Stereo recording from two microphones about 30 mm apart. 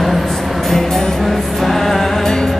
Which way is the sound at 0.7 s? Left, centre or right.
Centre.